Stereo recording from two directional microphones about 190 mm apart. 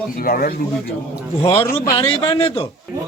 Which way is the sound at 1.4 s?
30° left (ahead or behind).